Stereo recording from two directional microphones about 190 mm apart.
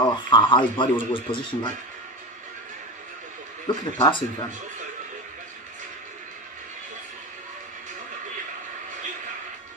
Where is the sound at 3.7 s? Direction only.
25° left (ahead or behind).